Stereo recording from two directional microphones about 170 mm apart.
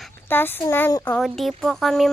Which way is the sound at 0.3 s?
10° left (ahead or behind).